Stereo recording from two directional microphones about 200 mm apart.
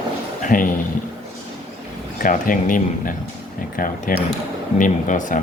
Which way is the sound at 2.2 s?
40° left (ahead or behind).